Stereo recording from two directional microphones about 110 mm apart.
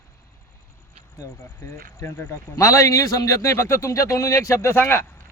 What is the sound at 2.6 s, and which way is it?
A man's voice, 30° left (ahead or behind).